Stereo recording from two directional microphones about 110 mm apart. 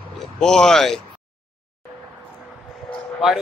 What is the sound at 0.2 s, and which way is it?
Speech, 5° left (ahead or behind).